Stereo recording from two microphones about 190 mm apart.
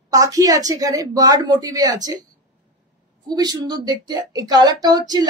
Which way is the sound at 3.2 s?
20° right (ahead or behind).